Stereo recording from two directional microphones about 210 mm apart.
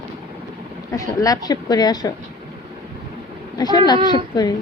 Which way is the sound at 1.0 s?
15° left (ahead or behind).